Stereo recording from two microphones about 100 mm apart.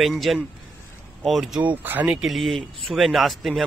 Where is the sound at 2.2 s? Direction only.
Centre (ahead or behind).